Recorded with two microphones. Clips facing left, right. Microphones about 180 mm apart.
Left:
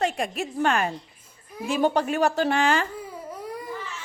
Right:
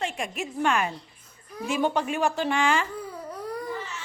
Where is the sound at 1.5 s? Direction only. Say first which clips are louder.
Left 2 dB; centre (ahead or behind).